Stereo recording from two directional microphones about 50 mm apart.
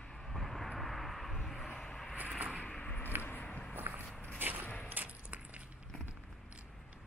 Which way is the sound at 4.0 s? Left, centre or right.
Left.